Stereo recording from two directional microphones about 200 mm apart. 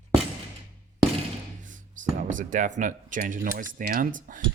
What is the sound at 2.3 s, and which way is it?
Speech, 40° right (ahead or behind).